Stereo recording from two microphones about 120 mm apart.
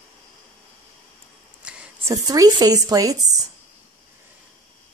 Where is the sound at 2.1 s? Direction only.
30° right (ahead or behind).